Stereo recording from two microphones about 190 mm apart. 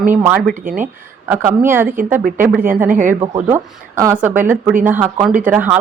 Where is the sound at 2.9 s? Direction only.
40° right (ahead or behind).